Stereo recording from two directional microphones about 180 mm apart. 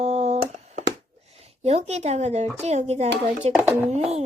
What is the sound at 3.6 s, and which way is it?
Speech, 10° right (ahead or behind).